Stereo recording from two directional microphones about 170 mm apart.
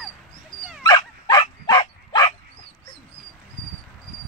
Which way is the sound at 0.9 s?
25° left (ahead or behind).